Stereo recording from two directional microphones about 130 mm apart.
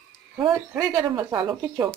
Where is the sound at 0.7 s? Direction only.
25° right (ahead or behind).